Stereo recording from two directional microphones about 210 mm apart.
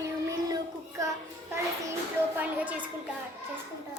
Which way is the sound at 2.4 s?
5° right (ahead or behind).